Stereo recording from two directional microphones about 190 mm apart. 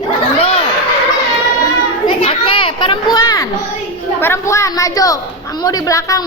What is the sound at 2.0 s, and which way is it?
Children playing, 30° left (ahead or behind).